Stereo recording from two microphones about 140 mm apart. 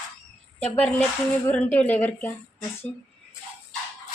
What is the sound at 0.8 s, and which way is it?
Speech, 10° left (ahead or behind).